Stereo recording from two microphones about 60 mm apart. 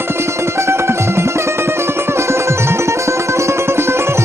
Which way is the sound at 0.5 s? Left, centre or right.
Right.